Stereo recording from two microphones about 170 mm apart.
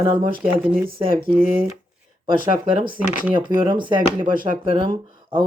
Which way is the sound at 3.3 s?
25° right (ahead or behind).